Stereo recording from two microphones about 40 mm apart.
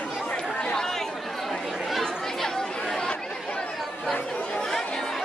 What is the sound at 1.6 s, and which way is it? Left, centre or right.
Chatter, centre.